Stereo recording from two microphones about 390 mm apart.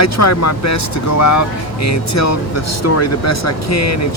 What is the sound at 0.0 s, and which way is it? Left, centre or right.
Speech, left.